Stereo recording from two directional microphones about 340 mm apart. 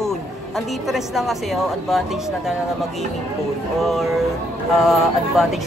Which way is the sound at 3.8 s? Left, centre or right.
Centre.